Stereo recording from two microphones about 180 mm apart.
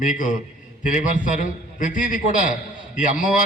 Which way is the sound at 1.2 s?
45° left (ahead or behind).